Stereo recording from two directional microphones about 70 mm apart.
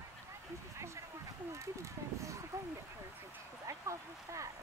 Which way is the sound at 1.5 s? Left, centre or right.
Right.